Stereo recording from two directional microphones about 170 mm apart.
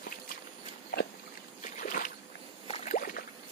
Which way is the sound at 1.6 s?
50° left (ahead or behind).